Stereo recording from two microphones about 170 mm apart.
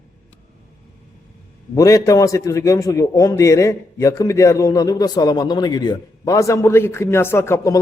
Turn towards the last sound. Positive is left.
turn(degrees=15)  # may be behind; listen again after turning